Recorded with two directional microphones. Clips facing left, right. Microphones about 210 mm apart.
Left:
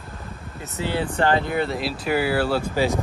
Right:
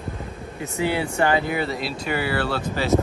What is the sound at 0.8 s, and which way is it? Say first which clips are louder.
Speech: right 1 dB; 10° right (ahead or behind).